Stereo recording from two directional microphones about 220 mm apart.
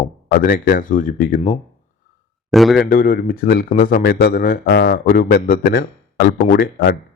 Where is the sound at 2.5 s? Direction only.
Centre (ahead or behind).